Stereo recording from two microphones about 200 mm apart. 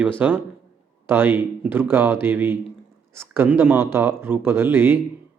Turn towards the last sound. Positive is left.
turn(degrees=-10)  # may be behind; listen again after turning